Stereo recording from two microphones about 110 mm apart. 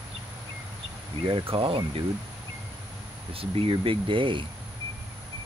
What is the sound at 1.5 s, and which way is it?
Speech, 55° right (ahead or behind).